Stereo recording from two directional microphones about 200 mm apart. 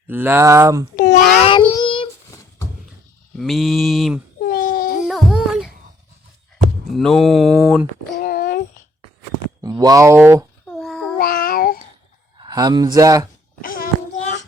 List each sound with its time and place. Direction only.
0.1 s speech: 10° right (ahead or behind)
0.9 s a sound: 40° left (ahead or behind)
1.7 s child singing: 25° left (ahead or behind)
3.3 s mantra: centre (ahead or behind)
4.4 s baby cry: 45° left (ahead or behind)
5.0 s a sound: 5° right (ahead or behind)
6.9 s mantra: centre (ahead or behind)
8.2 s a sound: 45° left (ahead or behind)
9.6 s speech: 20° right (ahead or behind)
10.7 s child singing: centre (ahead or behind)
11.2 s child singing: 45° left (ahead or behind)
12.4 s speech: 20° right (ahead or behind)
13.6 s a sound: 45° left (ahead or behind)